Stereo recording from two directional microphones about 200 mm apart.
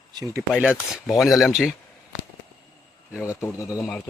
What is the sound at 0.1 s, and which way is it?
Speech, 20° right (ahead or behind).